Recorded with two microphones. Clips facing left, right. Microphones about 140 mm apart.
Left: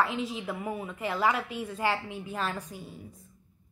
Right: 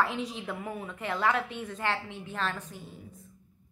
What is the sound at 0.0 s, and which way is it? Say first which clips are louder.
A woman's voice: left 1 dB; centre (ahead or behind).